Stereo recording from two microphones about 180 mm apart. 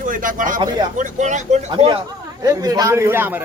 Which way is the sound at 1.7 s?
25° right (ahead or behind).